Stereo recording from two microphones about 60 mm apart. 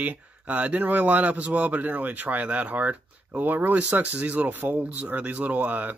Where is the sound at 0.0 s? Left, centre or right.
Right.